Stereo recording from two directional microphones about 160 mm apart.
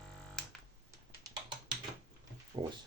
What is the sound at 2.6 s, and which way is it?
Speech, 30° right (ahead or behind).